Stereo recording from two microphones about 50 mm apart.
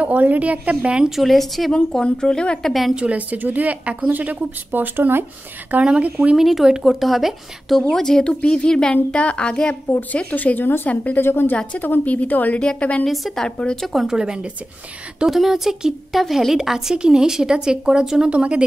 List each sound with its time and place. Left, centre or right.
0.0 s a woman's voice: right
1.1 s a woman's voice: centre
1.7 s a woman's voice: centre
2.6 s a woman's voice: centre
3.0 s speech: right
5.7 s a woman's voice: right
6.3 s a woman's voice: centre
7.9 s a woman's voice: centre
10.3 s a woman's voice: left
11.1 s a woman's voice: left
11.8 s a woman's voice: left
13.0 s a woman's voice: centre
13.9 s speech: centre
15.2 s a woman's voice: centre; by 18.6 s right